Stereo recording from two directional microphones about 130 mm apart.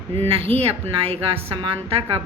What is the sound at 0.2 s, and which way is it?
A woman's voice, 45° right (ahead or behind).